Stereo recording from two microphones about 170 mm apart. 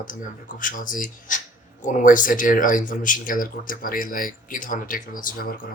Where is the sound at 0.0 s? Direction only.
50° left (ahead or behind).